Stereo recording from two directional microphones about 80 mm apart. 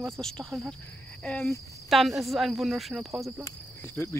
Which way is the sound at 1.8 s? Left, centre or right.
Centre.